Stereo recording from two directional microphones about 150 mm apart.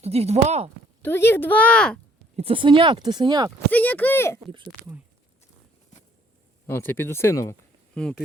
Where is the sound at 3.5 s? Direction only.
10° left (ahead or behind).